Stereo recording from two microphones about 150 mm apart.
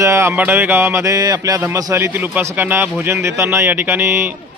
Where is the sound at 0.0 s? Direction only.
20° right (ahead or behind).